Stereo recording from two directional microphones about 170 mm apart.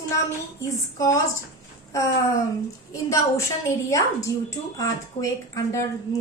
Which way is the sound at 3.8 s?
20° left (ahead or behind).